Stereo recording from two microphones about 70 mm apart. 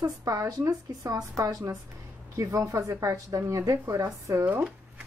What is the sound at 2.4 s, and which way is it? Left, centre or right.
A woman's voice, right.